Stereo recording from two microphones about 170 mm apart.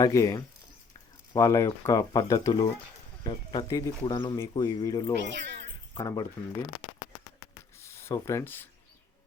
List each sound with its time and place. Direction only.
0.0 s speech: 20° left (ahead or behind)
5.2 s speech: 90° right
5.9 s speech: 20° left (ahead or behind)
7.8 s speech: 15° left (ahead or behind)